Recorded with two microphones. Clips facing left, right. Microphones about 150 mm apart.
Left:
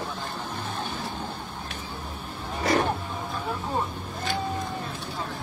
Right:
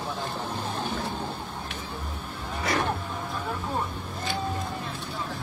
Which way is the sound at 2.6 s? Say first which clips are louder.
Left 4 dB; 35° left (ahead or behind).